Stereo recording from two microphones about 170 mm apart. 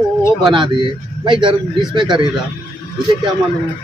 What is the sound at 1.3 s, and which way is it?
Speech, 30° right (ahead or behind).